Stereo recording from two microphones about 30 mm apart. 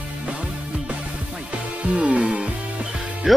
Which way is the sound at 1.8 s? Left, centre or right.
Right.